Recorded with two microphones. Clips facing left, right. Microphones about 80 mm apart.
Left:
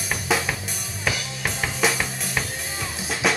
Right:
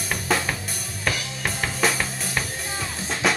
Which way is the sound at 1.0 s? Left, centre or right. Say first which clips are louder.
Even; centre.